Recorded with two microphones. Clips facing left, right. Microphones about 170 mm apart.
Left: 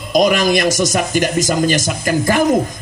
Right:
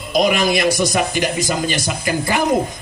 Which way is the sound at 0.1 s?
45° left (ahead or behind).